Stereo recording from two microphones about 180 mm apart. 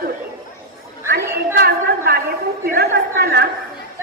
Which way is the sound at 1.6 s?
60° right (ahead or behind).